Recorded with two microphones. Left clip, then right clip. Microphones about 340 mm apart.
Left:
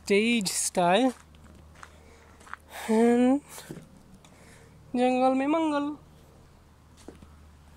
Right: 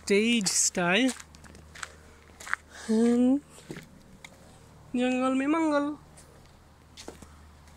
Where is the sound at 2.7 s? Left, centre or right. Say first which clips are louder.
Left 4 dB; centre.